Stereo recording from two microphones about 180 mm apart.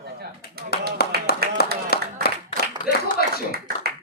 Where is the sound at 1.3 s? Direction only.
60° left (ahead or behind).